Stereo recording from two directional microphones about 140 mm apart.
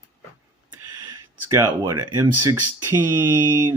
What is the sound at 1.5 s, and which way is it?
Speech, 25° right (ahead or behind).